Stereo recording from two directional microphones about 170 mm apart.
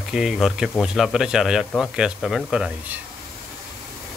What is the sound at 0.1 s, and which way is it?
Speech, centre (ahead or behind).